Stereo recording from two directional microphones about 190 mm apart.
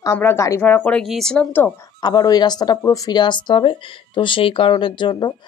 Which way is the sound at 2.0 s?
20° left (ahead or behind).